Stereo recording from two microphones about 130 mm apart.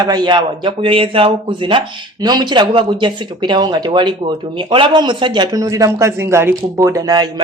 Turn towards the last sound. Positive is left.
turn(degrees=-30)  # may be behind; listen again after turning